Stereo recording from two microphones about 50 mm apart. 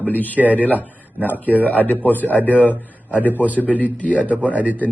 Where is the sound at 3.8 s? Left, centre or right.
Left.